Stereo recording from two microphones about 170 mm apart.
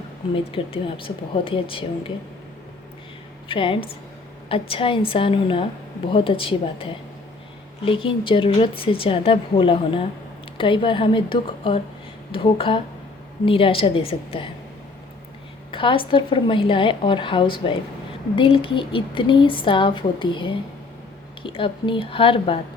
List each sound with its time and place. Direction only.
0.5 s speech: 35° left (ahead or behind)
3.5 s speech: 30° left (ahead or behind)
15.7 s a woman's voice: 30° left (ahead or behind)